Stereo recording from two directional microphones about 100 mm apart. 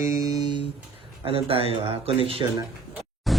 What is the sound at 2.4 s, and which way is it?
Speech, 50° right (ahead or behind).